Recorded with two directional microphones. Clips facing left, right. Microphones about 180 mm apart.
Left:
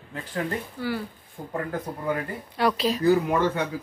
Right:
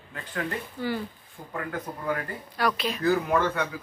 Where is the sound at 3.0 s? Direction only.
15° left (ahead or behind).